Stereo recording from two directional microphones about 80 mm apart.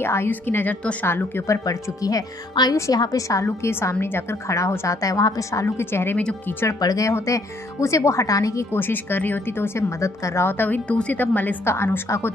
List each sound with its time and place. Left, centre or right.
0.0 s a woman's voice: left
1.5 s a woman's voice: left
6.1 s speech: centre
6.8 s a woman's voice: left
8.7 s a woman's voice: left
10.6 s a woman's voice: centre
11.6 s a woman's voice: left